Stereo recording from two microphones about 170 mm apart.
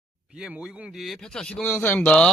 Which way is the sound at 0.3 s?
5° right (ahead or behind).